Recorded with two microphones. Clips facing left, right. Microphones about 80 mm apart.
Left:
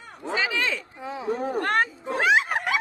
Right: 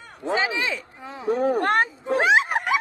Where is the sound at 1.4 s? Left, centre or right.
Right.